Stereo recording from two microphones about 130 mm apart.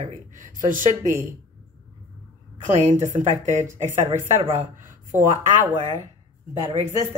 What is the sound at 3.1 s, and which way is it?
Speech, 65° right (ahead or behind).